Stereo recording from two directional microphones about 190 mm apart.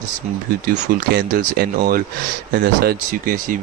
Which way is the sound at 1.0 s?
50° right (ahead or behind).